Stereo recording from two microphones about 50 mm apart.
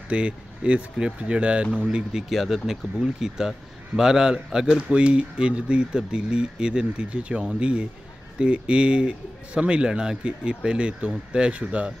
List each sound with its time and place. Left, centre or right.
0.1 s a man's voice: right
2.2 s a man's voice: centre